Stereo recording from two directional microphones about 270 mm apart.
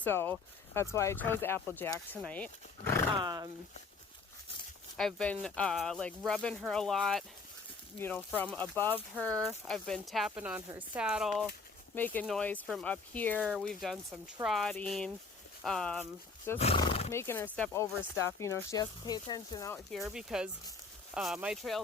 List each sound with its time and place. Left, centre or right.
0.0 s speech: centre
3.2 s speech: centre
4.9 s speech: centre
16.6 s speech: centre